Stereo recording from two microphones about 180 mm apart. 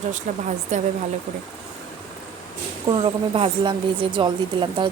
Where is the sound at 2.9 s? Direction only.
25° right (ahead or behind).